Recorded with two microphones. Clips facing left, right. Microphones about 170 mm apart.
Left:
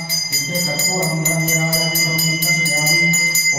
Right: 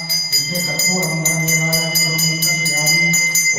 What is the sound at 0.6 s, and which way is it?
Bell, 15° left (ahead or behind).